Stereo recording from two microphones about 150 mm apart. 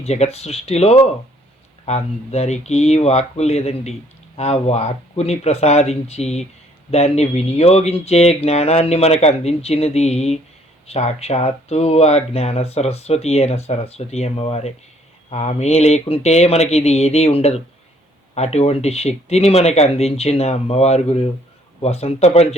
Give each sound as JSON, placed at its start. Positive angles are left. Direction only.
{"t": 0.0, "sound": "speech", "side_deg": 45}